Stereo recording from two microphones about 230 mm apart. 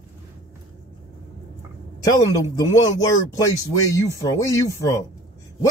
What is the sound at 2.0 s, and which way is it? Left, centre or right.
Speech, centre.